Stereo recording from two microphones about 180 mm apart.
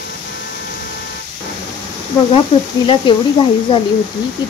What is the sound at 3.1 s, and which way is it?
Speech, 25° left (ahead or behind).